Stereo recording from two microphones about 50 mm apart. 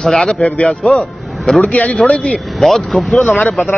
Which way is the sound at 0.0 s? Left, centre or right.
Centre.